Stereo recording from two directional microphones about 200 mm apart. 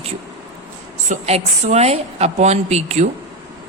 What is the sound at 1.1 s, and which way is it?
A woman's voice, 35° right (ahead or behind).